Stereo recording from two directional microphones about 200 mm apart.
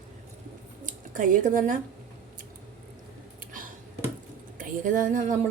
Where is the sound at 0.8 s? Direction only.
40° right (ahead or behind).